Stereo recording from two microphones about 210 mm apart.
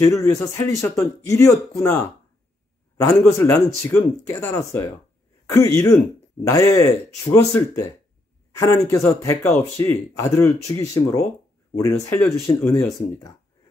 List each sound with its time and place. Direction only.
0.0 s speech: 15° left (ahead or behind)
3.0 s speech: 15° left (ahead or behind)